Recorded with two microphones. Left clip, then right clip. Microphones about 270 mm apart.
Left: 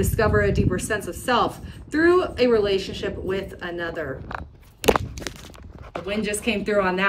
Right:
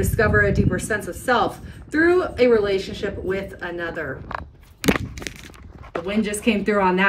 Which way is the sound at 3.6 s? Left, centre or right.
Centre.